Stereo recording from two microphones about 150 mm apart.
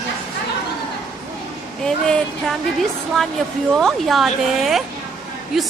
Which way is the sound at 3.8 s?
Centre (ahead or behind).